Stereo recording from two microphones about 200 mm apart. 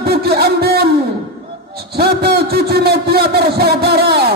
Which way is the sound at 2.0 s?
50° right (ahead or behind).